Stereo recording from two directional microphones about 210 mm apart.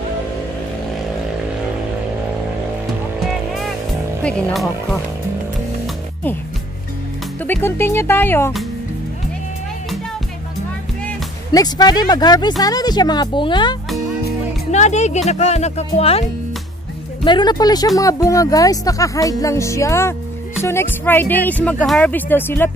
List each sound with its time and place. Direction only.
3.3 s vehicle: centre (ahead or behind)
4.2 s speech: 5° left (ahead or behind)
7.4 s speech: 10° left (ahead or behind)
11.5 s speech: 20° left (ahead or behind)
14.7 s speech: 35° left (ahead or behind); by 22.7 s 10° left (ahead or behind)